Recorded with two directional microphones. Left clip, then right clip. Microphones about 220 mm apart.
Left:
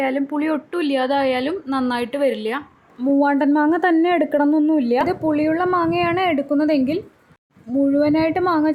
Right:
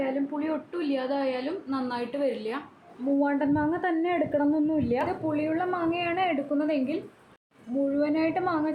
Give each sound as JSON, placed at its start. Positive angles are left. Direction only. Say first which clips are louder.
{"t": 0.0, "sound": "a woman's voice", "louder": "left 8 dB", "side_deg": 45}